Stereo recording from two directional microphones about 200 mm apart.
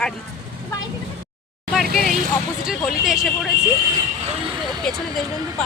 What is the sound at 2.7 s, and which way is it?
Speech, centre (ahead or behind).